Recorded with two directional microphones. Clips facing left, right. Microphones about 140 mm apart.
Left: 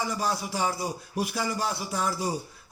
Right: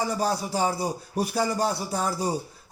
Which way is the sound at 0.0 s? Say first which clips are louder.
Right 3 dB; 35° right (ahead or behind).